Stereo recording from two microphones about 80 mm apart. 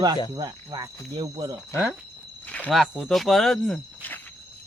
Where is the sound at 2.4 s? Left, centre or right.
Centre.